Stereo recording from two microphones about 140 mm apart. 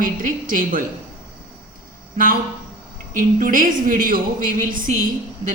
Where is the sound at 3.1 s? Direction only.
75° right (ahead or behind).